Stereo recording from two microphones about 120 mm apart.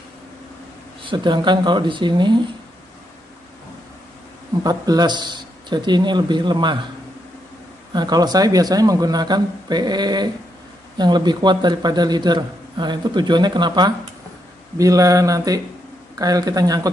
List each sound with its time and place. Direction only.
1.0 s a man's voice: 40° right (ahead or behind)
4.6 s a man's voice: 35° right (ahead or behind)
7.9 s a man's voice: 35° right (ahead or behind)